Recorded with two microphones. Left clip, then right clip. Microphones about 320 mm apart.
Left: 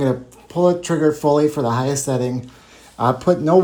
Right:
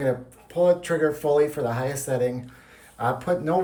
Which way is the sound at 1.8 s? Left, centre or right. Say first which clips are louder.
Left 5 dB; left.